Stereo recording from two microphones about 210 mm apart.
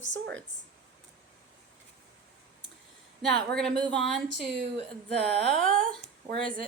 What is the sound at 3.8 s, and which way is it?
Speech, 5° left (ahead or behind).